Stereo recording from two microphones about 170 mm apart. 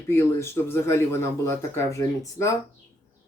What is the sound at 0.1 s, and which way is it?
Speech, 15° left (ahead or behind).